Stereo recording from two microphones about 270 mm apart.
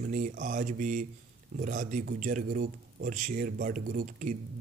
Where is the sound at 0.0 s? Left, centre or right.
Right.